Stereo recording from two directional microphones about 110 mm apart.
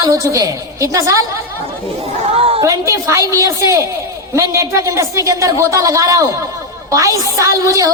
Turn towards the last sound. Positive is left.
turn(degrees=-30)  # may be behind; listen again after turning